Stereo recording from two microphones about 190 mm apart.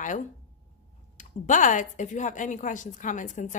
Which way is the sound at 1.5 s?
40° left (ahead or behind).